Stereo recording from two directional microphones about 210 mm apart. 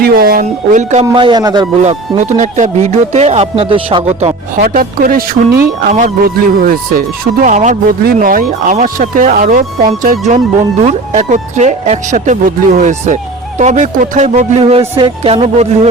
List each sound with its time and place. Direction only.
0.0 s speech: 45° right (ahead or behind)
1.0 s speech: 20° right (ahead or behind)
1.8 s speech: 35° right (ahead or behind)